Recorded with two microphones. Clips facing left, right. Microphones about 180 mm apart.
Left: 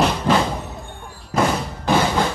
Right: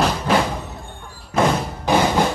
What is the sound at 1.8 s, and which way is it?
Music, 15° right (ahead or behind).